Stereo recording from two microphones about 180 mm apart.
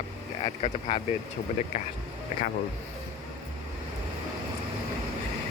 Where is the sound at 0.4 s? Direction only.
30° left (ahead or behind).